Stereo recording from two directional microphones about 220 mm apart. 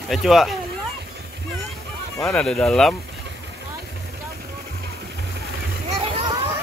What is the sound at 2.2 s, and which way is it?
Speech, centre (ahead or behind).